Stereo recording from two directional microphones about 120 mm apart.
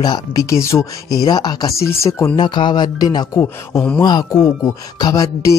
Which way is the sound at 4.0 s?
35° left (ahead or behind).